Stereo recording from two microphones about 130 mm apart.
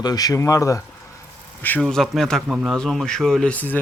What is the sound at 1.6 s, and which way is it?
Speech, 10° left (ahead or behind).